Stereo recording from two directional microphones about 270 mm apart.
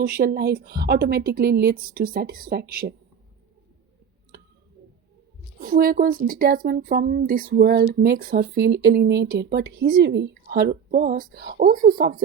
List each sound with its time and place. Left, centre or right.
0.0 s speech: right
5.6 s speech: right